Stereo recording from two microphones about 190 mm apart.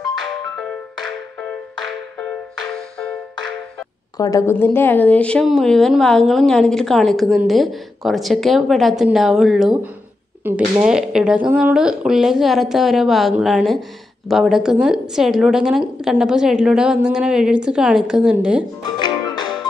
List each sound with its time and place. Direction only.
0.2 s music: 5° left (ahead or behind)
4.2 s speech: 15° left (ahead or behind); by 18.7 s 5° right (ahead or behind)
18.9 s music: 25° left (ahead or behind)